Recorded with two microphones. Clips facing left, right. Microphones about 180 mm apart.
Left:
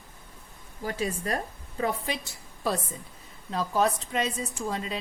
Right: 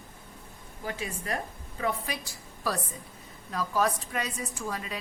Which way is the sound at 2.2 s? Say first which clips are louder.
Left 2 dB; 25° left (ahead or behind).